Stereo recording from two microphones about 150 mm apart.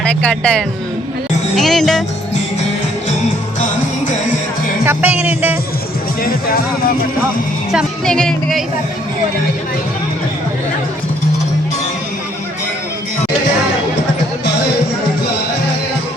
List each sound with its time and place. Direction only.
0.0 s speech: 10° left (ahead or behind)
4.9 s music: 10° right (ahead or behind)
6.2 s speech: 75° left (ahead or behind)
7.7 s speech: centre (ahead or behind)